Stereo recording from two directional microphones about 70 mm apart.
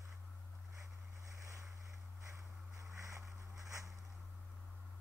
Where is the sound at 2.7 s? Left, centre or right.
Right.